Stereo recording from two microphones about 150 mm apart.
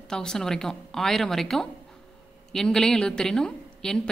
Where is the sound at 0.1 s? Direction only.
5° left (ahead or behind).